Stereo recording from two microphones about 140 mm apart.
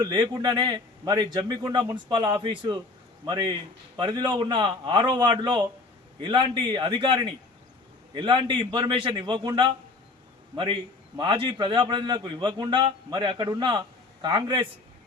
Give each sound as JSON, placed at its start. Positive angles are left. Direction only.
{"t": 0.0, "sound": "a man's voice", "side_deg": -30}